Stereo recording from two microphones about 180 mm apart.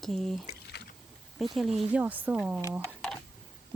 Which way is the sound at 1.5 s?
Centre (ahead or behind).